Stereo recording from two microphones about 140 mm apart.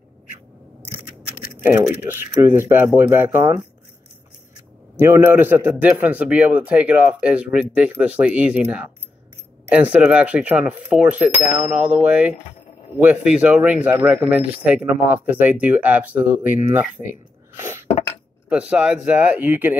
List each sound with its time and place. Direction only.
2.0 s a man's voice: 15° right (ahead or behind)
4.9 s a man's voice: 15° right (ahead or behind)
18.5 s a man's voice: 10° right (ahead or behind)